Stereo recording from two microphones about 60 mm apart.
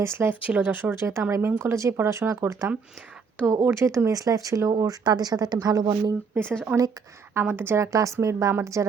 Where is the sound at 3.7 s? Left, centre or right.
Right.